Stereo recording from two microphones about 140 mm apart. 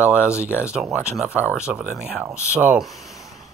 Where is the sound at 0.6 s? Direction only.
5° right (ahead or behind).